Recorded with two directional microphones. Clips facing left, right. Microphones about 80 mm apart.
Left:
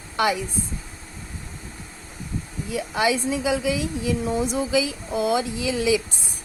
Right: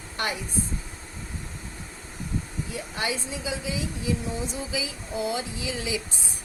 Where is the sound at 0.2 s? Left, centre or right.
Left.